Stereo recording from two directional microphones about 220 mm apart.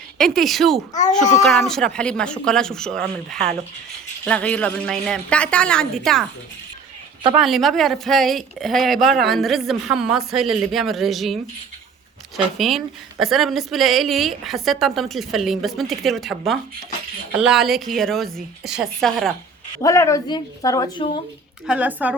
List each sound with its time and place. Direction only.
0.2 s speech: centre (ahead or behind)
7.3 s speech: centre (ahead or behind)
12.5 s speech: centre (ahead or behind)
19.8 s speech: 15° left (ahead or behind)
21.7 s a woman's voice: 5° right (ahead or behind)